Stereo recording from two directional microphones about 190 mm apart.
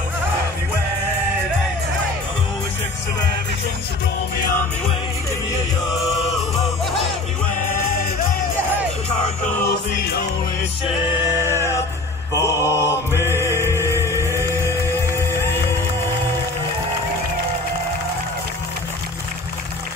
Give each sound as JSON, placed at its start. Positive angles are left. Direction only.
{"t": 7.5, "sound": "music", "side_deg": 45}
{"t": 9.5, "sound": "music", "side_deg": 10}
{"t": 11.2, "sound": "music", "side_deg": -15}
{"t": 12.4, "sound": "mantra", "side_deg": 15}
{"t": 13.1, "sound": "music", "side_deg": -15}